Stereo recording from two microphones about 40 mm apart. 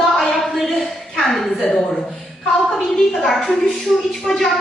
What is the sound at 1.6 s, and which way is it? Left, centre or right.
Speech, centre.